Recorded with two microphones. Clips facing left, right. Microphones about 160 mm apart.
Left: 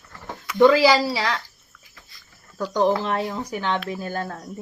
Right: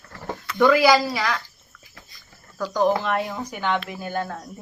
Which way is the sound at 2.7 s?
30° left (ahead or behind).